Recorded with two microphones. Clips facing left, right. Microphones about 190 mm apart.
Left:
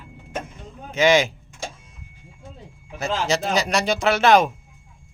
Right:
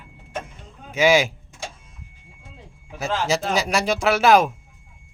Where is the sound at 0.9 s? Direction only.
5° right (ahead or behind).